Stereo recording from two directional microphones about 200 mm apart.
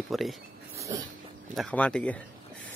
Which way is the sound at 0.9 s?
15° right (ahead or behind).